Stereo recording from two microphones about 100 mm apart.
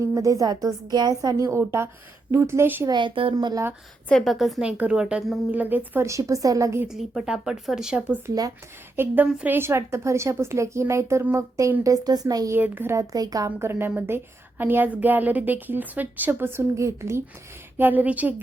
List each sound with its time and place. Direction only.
0.0 s a woman's voice: 30° right (ahead or behind)
2.8 s speech: 50° right (ahead or behind)
3.3 s a woman's voice: 40° right (ahead or behind)
4.1 s speech: centre (ahead or behind)
4.6 s a woman's voice: 10° right (ahead or behind)
6.1 s a woman's voice: 35° right (ahead or behind)
6.8 s a woman's voice: 5° right (ahead or behind)
9.6 s a woman's voice: 25° right (ahead or behind)
11.8 s a woman's voice: 40° right (ahead or behind)
12.5 s a woman's voice: 20° right (ahead or behind)
13.0 s a woman's voice: 40° right (ahead or behind)
13.6 s a woman's voice: 25° right (ahead or behind)